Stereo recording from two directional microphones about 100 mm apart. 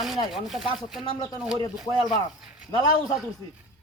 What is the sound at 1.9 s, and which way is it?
Speech, 50° left (ahead or behind).